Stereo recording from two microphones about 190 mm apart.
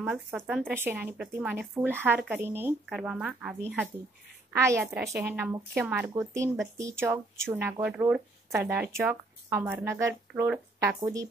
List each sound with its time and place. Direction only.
0.0 s a woman's voice: 5° right (ahead or behind)
11.0 s a woman's voice: 20° right (ahead or behind)